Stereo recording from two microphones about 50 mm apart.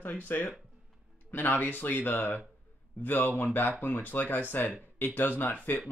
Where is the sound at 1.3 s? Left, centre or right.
Left.